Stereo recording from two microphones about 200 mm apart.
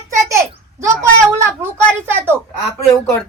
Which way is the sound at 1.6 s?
10° right (ahead or behind).